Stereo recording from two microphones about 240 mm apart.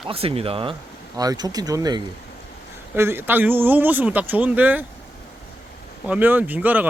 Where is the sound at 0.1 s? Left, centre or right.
Right; by 4.9 s centre.